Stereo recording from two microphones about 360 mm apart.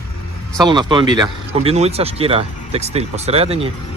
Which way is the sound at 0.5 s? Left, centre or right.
Centre.